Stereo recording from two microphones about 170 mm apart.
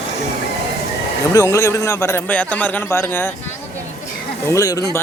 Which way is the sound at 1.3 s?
15° left (ahead or behind).